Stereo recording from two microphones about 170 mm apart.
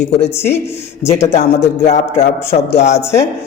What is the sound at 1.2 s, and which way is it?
Music, 40° left (ahead or behind).